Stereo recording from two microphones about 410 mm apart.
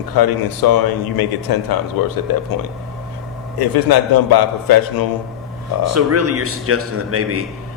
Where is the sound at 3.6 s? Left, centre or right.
Left.